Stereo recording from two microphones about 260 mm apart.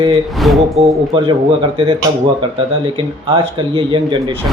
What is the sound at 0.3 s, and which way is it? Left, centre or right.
Speech, centre.